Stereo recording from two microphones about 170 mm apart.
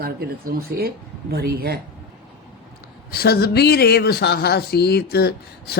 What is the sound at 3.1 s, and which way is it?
Speech, 65° left (ahead or behind).